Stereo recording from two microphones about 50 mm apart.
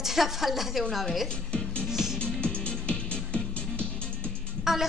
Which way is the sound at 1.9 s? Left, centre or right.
Centre.